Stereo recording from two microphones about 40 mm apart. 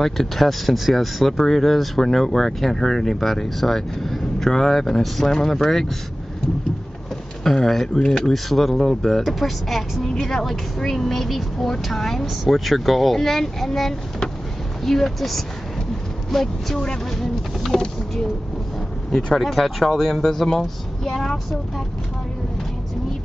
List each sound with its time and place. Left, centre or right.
0.0 s speech: centre
7.4 s speech: centre
16.8 s speech: centre
17.6 s a sound: centre
19.3 s speech: centre